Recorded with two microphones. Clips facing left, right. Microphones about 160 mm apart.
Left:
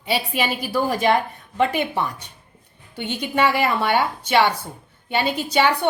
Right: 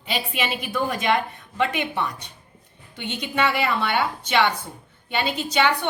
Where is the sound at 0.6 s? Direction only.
35° left (ahead or behind).